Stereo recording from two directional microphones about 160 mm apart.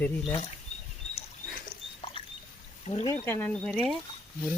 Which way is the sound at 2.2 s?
35° left (ahead or behind).